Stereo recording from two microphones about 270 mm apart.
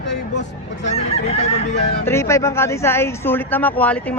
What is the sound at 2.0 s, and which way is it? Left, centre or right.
Speech, centre.